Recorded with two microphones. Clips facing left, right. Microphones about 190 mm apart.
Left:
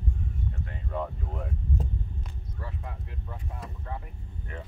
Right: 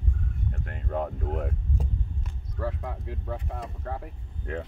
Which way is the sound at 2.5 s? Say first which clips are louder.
Right 9 dB; 85° right.